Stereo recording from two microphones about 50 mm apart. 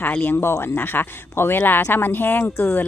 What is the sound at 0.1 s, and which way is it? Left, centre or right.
Speech, left.